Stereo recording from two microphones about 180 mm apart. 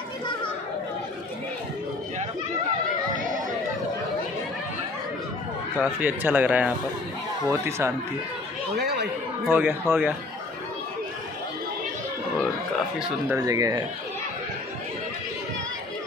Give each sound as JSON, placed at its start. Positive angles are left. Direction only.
{"t": 5.8, "sound": "speech", "side_deg": -10}
{"t": 8.7, "sound": "speech", "side_deg": -65}
{"t": 9.5, "sound": "speech", "side_deg": -10}
{"t": 13.4, "sound": "speech", "side_deg": -20}